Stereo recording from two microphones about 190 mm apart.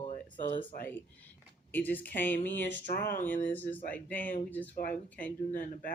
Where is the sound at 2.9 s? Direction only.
50° left (ahead or behind).